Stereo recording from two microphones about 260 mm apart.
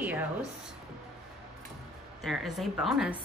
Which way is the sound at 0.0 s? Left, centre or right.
Centre.